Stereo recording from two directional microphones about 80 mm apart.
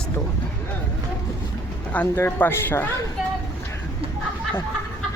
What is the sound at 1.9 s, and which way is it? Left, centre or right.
Speech, centre.